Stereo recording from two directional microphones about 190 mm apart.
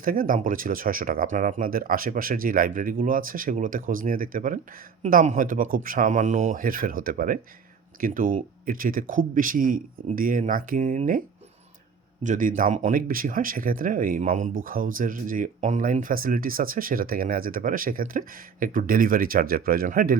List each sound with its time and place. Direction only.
0.0 s speech: 50° right (ahead or behind)
12.2 s speech: 40° right (ahead or behind)